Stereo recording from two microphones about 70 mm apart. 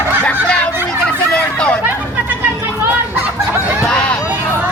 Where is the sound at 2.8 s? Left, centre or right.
Right.